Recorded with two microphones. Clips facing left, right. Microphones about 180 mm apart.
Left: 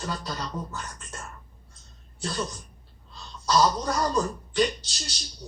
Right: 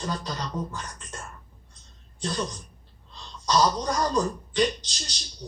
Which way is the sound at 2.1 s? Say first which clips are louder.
Right 1 dB; 5° left (ahead or behind).